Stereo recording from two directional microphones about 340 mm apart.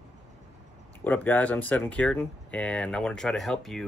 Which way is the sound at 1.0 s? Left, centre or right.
Centre.